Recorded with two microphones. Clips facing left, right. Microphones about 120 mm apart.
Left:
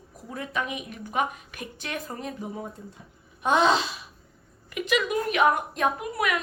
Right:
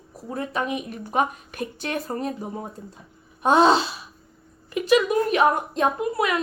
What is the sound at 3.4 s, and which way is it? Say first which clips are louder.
A woman's voice: right 5 dB; 35° right (ahead or behind).